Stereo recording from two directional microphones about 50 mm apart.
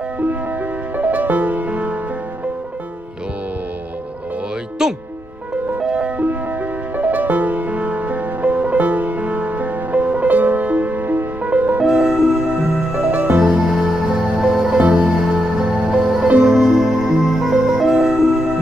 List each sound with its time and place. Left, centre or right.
0.3 s music: right
5.8 s music: right
7.0 s music: right
11.8 s music: centre
12.4 s music: right
13.5 s music: centre
14.0 s music: right
14.4 s music: centre
14.8 s music: right
15.0 s music: centre
17.2 s music: centre